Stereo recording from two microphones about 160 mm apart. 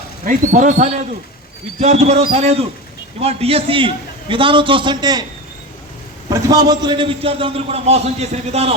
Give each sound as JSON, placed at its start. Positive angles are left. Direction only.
{"t": 0.3, "sound": "a man's voice", "side_deg": -55}
{"t": 6.2, "sound": "a man's voice", "side_deg": -25}